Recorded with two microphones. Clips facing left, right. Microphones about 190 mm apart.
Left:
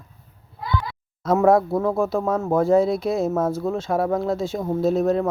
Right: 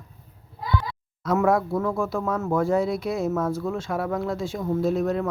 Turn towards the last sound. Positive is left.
turn(degrees=25)  # may be behind; listen again after turning